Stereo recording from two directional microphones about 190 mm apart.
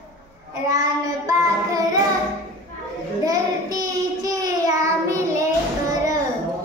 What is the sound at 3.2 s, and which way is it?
Child singing, 20° right (ahead or behind).